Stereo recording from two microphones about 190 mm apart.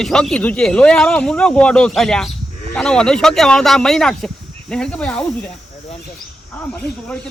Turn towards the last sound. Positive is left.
turn(degrees=5)  # may be behind; listen again after turning